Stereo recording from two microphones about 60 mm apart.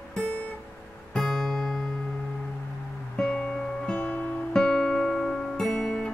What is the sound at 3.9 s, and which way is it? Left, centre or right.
Music, left.